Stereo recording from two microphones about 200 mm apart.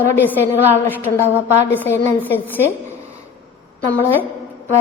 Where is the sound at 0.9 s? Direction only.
10° left (ahead or behind).